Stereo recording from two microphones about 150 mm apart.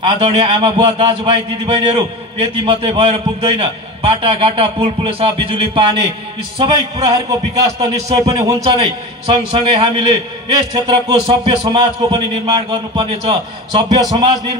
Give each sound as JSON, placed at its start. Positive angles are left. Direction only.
{"t": 0.0, "sound": "a man's voice", "side_deg": -40}